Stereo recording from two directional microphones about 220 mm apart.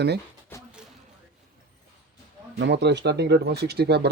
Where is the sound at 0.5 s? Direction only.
10° left (ahead or behind).